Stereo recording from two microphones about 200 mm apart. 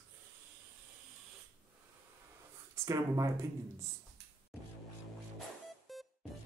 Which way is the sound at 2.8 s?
15° right (ahead or behind).